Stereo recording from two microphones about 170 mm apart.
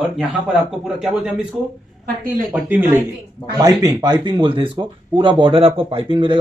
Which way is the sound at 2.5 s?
10° right (ahead or behind).